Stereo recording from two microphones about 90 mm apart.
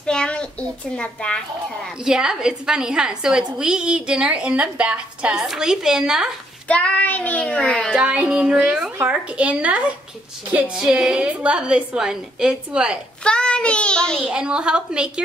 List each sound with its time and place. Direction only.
0.0 s a child's voice: 10° left (ahead or behind)
2.0 s a woman's voice: 5° right (ahead or behind)
6.7 s child singing: 15° left (ahead or behind)
7.9 s a woman's voice: 10° right (ahead or behind)
13.2 s child singing: 10° left (ahead or behind)
14.2 s a woman's voice: 10° right (ahead or behind)